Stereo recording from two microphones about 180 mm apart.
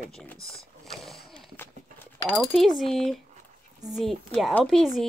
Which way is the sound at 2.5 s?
Centre (ahead or behind).